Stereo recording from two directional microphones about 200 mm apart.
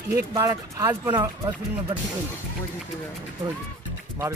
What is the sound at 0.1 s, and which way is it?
Speech, 15° right (ahead or behind).